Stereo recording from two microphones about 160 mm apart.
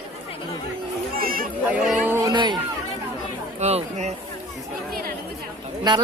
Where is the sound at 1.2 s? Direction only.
65° right (ahead or behind).